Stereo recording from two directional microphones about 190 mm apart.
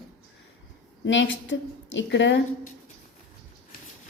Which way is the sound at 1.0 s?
75° left (ahead or behind).